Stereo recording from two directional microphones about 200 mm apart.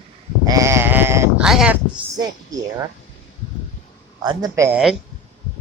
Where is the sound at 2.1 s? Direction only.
20° right (ahead or behind).